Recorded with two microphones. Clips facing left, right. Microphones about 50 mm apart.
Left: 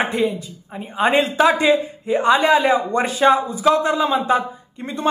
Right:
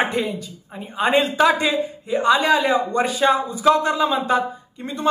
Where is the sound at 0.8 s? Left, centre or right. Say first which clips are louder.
Left 1 dB; left.